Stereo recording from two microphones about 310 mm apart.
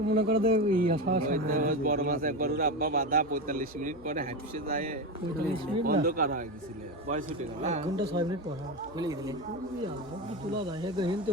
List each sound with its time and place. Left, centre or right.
0.1 s a man's voice: right; by 9.3 s centre
10.8 s a man's voice: centre